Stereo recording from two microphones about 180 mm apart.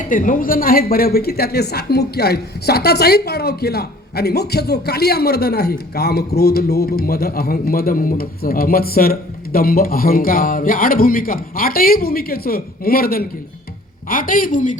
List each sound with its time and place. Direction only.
0.1 s a woman's voice: 50° left (ahead or behind)